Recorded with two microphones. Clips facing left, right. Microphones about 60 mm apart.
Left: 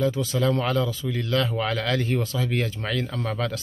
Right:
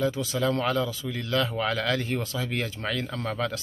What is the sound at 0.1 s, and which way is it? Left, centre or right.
Speech, left.